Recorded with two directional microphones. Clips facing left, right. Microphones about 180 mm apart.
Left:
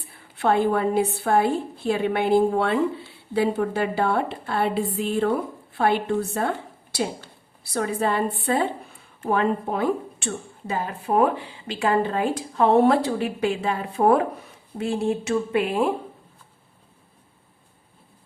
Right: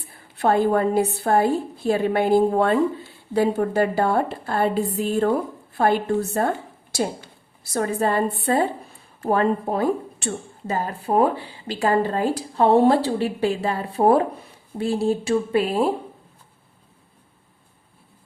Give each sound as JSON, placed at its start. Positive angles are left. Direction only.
{"t": 0.3, "sound": "a woman's voice", "side_deg": -40}
{"t": 7.6, "sound": "a woman's voice", "side_deg": -45}